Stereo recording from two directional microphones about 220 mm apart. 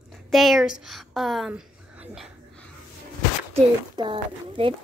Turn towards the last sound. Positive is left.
turn(degrees=-25)  # may be behind; listen again after turning